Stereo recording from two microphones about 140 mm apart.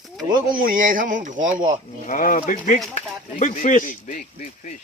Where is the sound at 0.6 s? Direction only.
75° right (ahead or behind).